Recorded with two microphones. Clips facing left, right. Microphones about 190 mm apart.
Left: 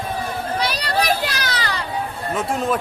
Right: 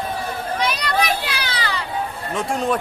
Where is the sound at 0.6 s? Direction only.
35° left (ahead or behind).